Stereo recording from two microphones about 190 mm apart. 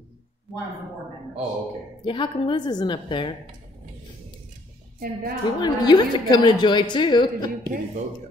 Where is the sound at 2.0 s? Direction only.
25° left (ahead or behind).